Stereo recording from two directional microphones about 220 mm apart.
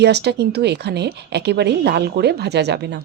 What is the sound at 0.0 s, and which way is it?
A woman's voice, 50° right (ahead or behind).